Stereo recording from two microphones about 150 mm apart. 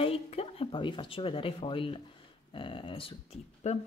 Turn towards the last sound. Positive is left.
turn(degrees=45)  # may be behind; listen again after turning